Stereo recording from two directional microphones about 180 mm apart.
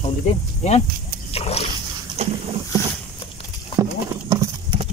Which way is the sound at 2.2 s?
35° right (ahead or behind).